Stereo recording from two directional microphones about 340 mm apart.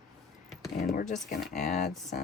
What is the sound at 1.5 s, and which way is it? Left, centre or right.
Speech, left.